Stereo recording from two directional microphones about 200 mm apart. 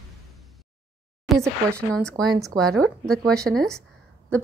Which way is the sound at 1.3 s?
Centre (ahead or behind).